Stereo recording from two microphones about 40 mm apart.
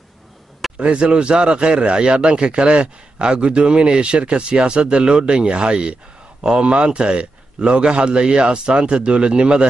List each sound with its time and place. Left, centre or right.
0.7 s speech: right